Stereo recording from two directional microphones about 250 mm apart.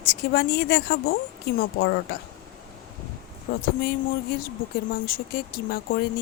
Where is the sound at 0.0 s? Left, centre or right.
Left.